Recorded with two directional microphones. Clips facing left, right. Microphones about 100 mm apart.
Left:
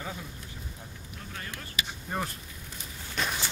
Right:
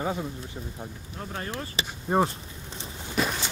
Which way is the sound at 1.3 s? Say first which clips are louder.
Right 5 dB; 35° right (ahead or behind).